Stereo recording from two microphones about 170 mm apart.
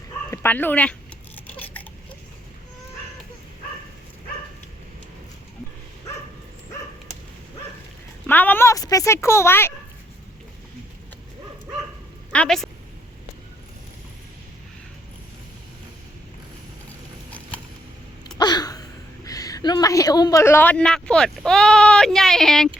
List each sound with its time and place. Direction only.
0.3 s speech: 10° left (ahead or behind)
1.5 s a sound: 10° left (ahead or behind)
8.3 s a woman's voice: 10° left (ahead or behind)
12.3 s a woman's voice: 5° left (ahead or behind)
18.3 s a sound: 25° left (ahead or behind)
19.2 s speech: 20° left (ahead or behind); by 22.7 s 5° left (ahead or behind)